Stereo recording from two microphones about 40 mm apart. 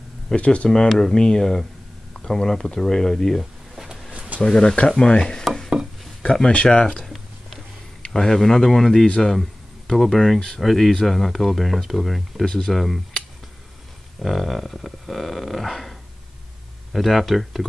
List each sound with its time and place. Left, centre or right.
0.4 s speech: left
0.7 s speech: centre
3.7 s a sound: centre
4.1 s a sound: right
4.4 s speech: centre
6.5 s speech: left
8.1 s speech: centre
12.4 s speech: centre
12.7 s speech: centre
14.2 s speech: centre